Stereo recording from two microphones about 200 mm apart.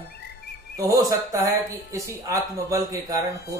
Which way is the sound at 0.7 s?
15° right (ahead or behind).